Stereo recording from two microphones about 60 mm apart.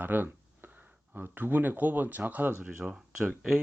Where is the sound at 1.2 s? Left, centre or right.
Right.